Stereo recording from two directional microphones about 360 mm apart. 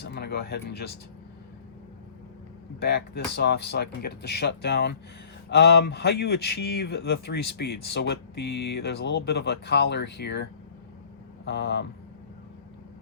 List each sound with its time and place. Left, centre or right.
0.0 s speech: left
2.8 s speech: left
11.4 s speech: left